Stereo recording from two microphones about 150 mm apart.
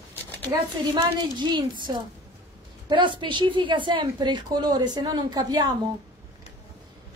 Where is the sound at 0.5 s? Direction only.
30° right (ahead or behind).